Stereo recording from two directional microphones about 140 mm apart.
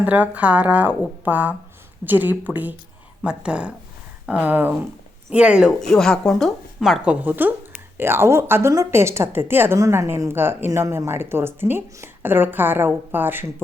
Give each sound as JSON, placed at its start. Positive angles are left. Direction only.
{"t": 0.0, "sound": "a woman's voice", "side_deg": -10}